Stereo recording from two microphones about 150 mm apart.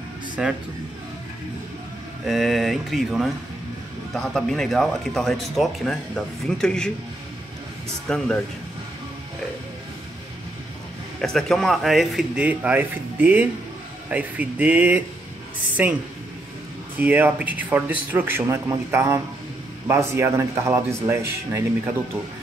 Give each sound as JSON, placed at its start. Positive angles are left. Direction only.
{"t": 0.4, "sound": "speech", "side_deg": -5}
{"t": 2.2, "sound": "speech", "side_deg": 0}
{"t": 8.1, "sound": "speech", "side_deg": 5}
{"t": 11.1, "sound": "a woman's voice", "side_deg": 0}